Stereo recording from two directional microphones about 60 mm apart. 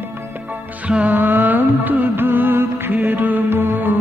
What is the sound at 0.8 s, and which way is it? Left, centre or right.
Music, right.